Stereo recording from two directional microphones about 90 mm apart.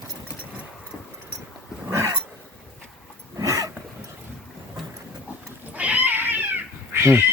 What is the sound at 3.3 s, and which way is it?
Dog, 35° right (ahead or behind).